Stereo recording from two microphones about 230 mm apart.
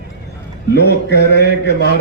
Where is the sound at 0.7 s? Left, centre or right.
Left.